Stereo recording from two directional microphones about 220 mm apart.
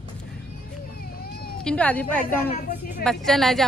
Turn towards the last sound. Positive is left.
turn(degrees=0)  # may be behind; listen again after turning